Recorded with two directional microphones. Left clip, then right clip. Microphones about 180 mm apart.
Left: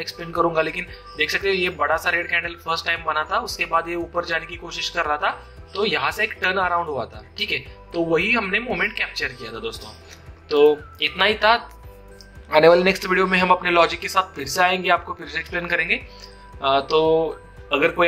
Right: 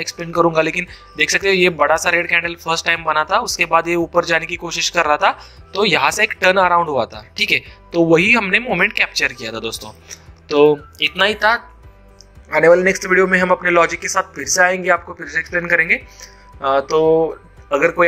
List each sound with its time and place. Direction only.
0.0 s speech: 40° right (ahead or behind)
12.5 s speech: 10° right (ahead or behind)